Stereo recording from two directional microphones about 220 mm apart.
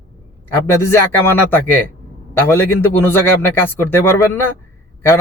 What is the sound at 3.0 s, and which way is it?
Speech, 10° left (ahead or behind).